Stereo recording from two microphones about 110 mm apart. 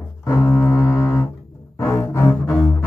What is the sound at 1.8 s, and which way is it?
Cello, 25° left (ahead or behind).